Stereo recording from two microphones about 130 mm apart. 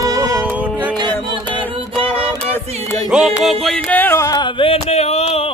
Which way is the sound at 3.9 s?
15° left (ahead or behind).